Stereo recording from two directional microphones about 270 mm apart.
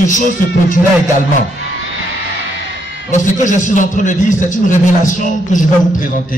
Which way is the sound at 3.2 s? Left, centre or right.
Left.